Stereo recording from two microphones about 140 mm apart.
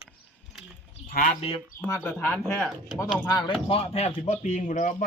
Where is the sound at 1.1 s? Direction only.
75° left (ahead or behind).